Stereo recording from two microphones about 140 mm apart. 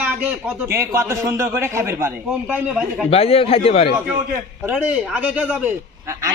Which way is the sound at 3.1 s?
45° left (ahead or behind).